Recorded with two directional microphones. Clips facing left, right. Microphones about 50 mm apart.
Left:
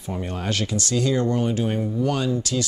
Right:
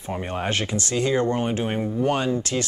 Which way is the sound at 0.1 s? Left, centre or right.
Right.